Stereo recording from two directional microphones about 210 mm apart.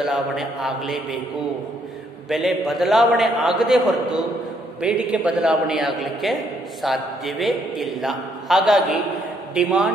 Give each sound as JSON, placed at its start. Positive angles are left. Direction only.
{"t": 0.0, "sound": "a man's voice", "side_deg": 0}
{"t": 2.2, "sound": "a man's voice", "side_deg": 0}